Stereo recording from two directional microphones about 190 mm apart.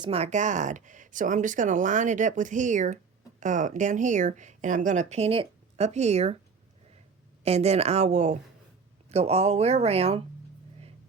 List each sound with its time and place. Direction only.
0.0 s speech: 35° right (ahead or behind)
7.4 s speech: 35° right (ahead or behind)